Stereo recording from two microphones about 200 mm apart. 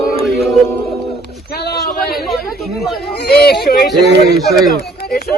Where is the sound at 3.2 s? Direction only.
50° left (ahead or behind).